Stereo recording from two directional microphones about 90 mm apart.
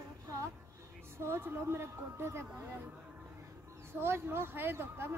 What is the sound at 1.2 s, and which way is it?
Speech, 25° right (ahead or behind).